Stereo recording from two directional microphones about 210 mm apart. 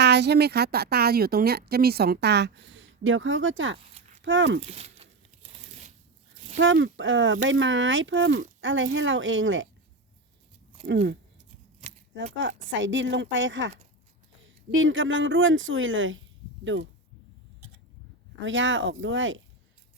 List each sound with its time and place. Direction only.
0.0 s a woman's voice: 55° right (ahead or behind)
4.6 s crumpling: 30° right (ahead or behind)
6.6 s speech: 65° right (ahead or behind)
10.8 s speech: 55° right (ahead or behind)
18.3 s speech: 65° right (ahead or behind)